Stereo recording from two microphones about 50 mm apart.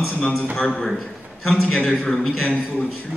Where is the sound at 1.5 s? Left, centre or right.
Left.